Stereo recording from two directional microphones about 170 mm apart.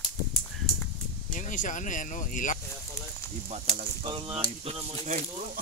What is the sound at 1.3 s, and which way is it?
Speech, 50° left (ahead or behind).